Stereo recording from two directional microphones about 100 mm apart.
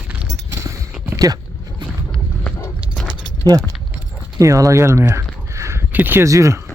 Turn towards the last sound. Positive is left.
turn(degrees=-30)  # may be behind; listen again after turning